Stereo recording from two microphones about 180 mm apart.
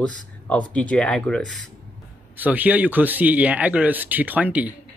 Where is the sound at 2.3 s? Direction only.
10° right (ahead or behind).